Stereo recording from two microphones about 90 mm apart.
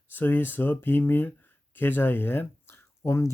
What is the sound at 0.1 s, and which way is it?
Speech, 20° left (ahead or behind).